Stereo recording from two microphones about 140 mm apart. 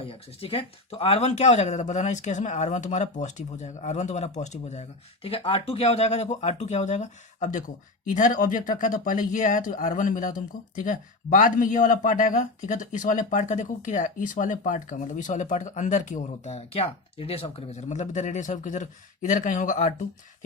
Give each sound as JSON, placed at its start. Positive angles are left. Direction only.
{"t": 0.0, "sound": "speech", "side_deg": 40}